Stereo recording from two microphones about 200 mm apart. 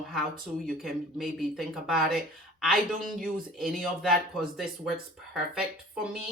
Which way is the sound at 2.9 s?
45° right (ahead or behind).